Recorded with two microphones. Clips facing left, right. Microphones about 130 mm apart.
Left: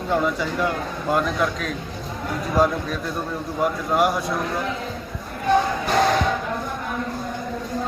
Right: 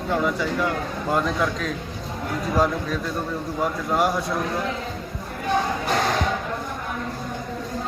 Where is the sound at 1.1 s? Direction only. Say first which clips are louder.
Left 1 dB; 20° left (ahead or behind).